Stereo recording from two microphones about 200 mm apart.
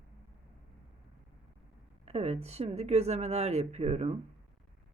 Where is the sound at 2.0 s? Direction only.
30° right (ahead or behind).